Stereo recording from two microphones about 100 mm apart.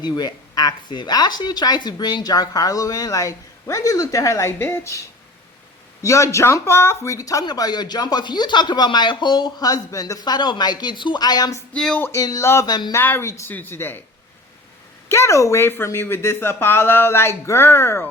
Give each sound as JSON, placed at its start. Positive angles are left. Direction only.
{"t": 0.0, "sound": "speech", "side_deg": 40}
{"t": 11.7, "sound": "speech", "side_deg": 5}
{"t": 12.1, "sound": "speech", "side_deg": 35}
{"t": 12.6, "sound": "speech", "side_deg": 45}
{"t": 12.9, "sound": "speech", "side_deg": 20}
{"t": 15.1, "sound": "speech", "side_deg": 30}